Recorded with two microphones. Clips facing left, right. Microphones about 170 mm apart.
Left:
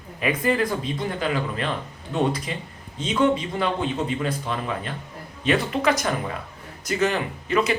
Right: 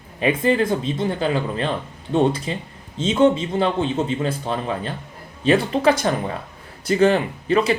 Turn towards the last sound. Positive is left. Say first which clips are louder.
# right 4 dB
turn(degrees=-30)  # may be behind; listen again after turning